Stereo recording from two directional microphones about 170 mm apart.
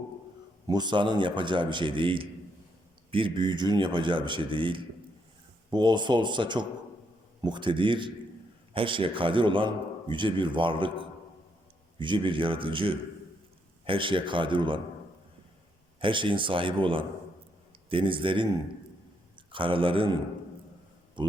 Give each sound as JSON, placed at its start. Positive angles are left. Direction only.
{"t": 0.7, "sound": "a man's voice", "side_deg": -25}
{"t": 11.9, "sound": "a man's voice", "side_deg": -30}
{"t": 16.0, "sound": "a man's voice", "side_deg": -30}
{"t": 21.2, "sound": "speech", "side_deg": -30}